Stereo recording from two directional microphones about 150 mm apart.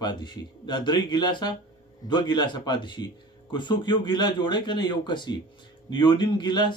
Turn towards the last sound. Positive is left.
turn(degrees=30)  # may be behind; listen again after turning